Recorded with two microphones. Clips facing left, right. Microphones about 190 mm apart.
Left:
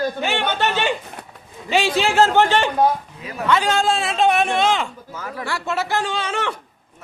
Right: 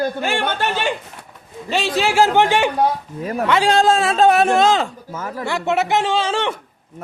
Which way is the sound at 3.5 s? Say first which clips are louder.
Right 3 dB; 30° right (ahead or behind).